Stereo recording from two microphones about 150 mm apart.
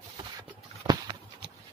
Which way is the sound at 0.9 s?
30° right (ahead or behind).